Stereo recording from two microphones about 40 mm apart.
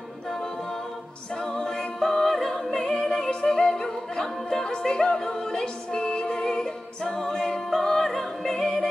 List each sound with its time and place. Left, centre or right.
1.3 s music: centre
3.2 s opera: centre
4.2 s music: centre
7.1 s a capella: centre
7.7 s music: centre